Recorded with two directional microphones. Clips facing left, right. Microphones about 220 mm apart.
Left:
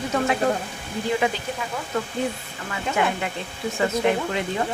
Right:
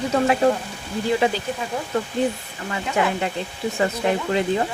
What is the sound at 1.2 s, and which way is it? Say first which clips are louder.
Speech: right 3 dB; 30° right (ahead or behind).